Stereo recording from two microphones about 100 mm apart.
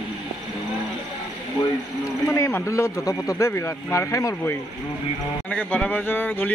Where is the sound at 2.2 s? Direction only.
30° left (ahead or behind).